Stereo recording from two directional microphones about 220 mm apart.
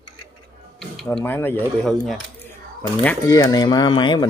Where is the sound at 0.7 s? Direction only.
Centre (ahead or behind).